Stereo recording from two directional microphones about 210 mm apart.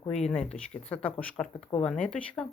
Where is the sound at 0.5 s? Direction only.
5° left (ahead or behind).